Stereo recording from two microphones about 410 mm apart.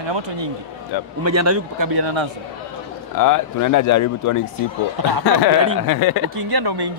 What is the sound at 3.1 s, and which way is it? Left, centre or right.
A man's voice, left.